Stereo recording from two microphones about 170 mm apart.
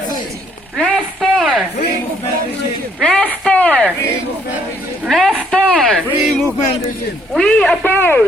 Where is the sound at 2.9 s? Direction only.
5° left (ahead or behind).